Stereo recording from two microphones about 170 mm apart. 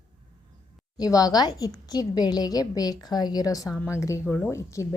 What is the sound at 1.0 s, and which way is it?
A woman's voice, 20° left (ahead or behind).